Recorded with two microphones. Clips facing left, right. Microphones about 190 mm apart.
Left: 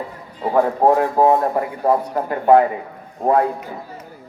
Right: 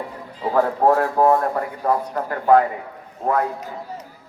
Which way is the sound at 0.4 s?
15° left (ahead or behind).